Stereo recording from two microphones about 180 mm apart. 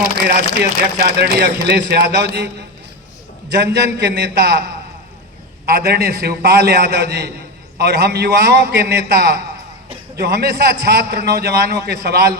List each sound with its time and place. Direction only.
0.3 s speech: 65° right (ahead or behind)
3.5 s speech: 70° right (ahead or behind)
5.6 s a man's voice: 60° right (ahead or behind)